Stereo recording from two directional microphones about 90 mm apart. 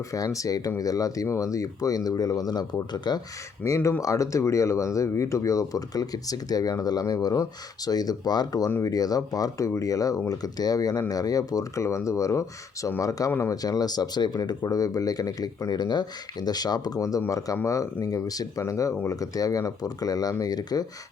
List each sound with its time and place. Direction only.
0.1 s speech: 40° left (ahead or behind); by 3.2 s 55° left (ahead or behind)
4.0 s speech: 35° left (ahead or behind)